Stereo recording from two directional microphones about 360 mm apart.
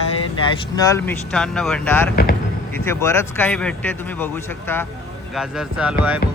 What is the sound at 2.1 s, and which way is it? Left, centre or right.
Speech, left.